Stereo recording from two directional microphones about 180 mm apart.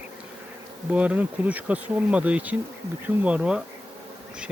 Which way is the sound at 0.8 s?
5° right (ahead or behind).